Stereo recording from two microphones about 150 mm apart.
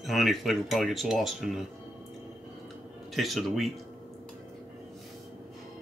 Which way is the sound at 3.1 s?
Centre (ahead or behind).